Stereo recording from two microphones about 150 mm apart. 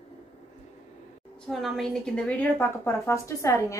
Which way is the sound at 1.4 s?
Centre (ahead or behind).